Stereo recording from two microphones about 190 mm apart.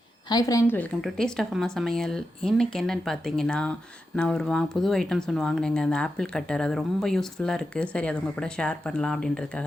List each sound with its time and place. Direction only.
0.3 s a woman's voice: 20° left (ahead or behind)
1.0 s speech: centre (ahead or behind)